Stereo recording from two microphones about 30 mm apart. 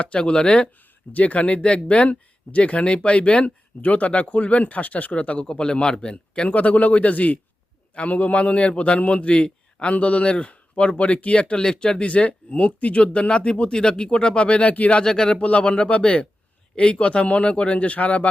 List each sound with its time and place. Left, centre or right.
0.0 s speech: left
1.1 s speech: left
3.4 s speech: left
5.4 s speech: left
6.5 s speech: left
11.5 s speech: left
12.0 s speech: left
15.0 s speech: left
15.4 s speech: left
16.7 s speech: left
17.0 s speech: left